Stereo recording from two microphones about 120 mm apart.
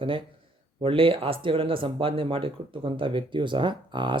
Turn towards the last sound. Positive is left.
turn(degrees=-40)  # may be behind; listen again after turning